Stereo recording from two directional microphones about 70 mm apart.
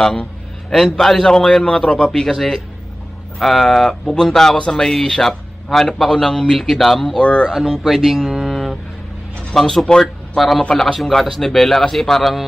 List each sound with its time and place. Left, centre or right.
0.0 s a man's voice: centre
7.2 s a man's voice: centre
7.5 s speech: centre